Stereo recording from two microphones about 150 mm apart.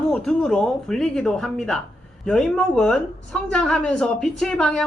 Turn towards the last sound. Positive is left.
turn(degrees=5)  # may be behind; listen again after turning